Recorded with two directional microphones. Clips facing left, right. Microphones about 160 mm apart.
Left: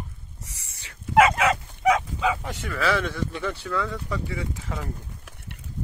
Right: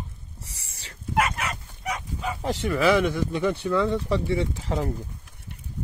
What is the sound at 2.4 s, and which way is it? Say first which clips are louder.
Speech: right 5 dB; 20° right (ahead or behind).